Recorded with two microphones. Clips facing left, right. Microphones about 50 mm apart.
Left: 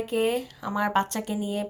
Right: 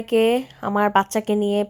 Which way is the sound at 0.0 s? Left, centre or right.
Right.